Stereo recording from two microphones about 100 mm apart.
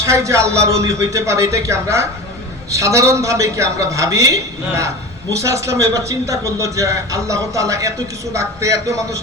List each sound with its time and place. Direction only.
0.0 s a man's voice: 30° right (ahead or behind)